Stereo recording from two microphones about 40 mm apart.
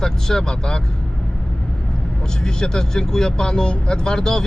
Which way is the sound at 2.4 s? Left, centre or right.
Centre.